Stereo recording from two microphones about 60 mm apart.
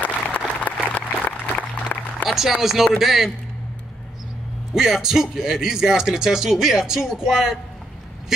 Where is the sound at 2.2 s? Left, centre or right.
Centre.